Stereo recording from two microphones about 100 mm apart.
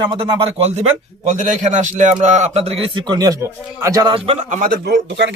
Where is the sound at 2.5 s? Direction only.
90° right.